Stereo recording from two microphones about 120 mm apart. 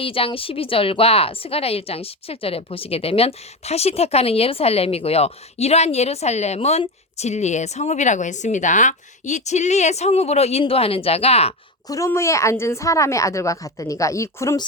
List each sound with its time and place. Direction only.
0.0 s a woman's voice: 50° left (ahead or behind)
11.9 s a woman's voice: 25° left (ahead or behind)